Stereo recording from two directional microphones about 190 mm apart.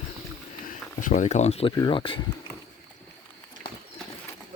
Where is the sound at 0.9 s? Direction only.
40° left (ahead or behind); by 2.2 s 25° left (ahead or behind).